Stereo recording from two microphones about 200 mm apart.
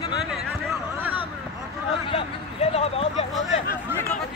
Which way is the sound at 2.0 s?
30° left (ahead or behind).